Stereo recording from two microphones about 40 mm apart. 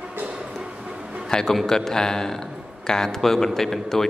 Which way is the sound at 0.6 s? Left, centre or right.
Right.